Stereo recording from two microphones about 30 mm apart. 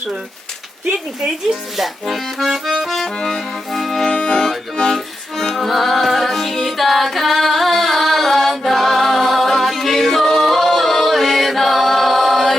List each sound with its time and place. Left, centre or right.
2.0 s accordion: centre
2.4 s accordion: centre
3.1 s accordion: left
3.7 s accordion: centre; by 4.4 s left
5.4 s music: centre
5.6 s music: centre
6.7 s singing: centre